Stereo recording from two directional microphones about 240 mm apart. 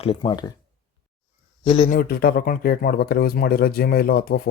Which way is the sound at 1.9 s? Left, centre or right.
Left.